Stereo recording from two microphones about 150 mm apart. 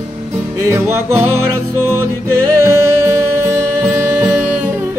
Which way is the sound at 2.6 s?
20° right (ahead or behind).